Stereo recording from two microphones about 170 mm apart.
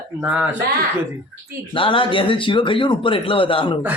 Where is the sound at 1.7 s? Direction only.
30° left (ahead or behind).